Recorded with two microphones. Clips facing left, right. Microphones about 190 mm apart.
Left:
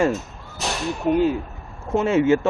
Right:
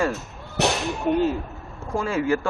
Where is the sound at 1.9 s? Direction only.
25° left (ahead or behind).